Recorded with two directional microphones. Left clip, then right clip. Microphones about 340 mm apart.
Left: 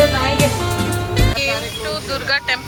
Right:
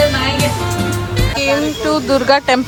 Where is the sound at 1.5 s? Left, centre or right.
Centre.